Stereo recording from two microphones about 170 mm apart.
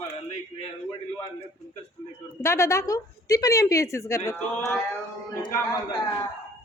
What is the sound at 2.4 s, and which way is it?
A woman's voice, 15° left (ahead or behind).